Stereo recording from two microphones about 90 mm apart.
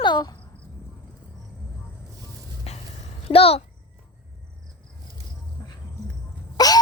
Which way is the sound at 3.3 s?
90° left.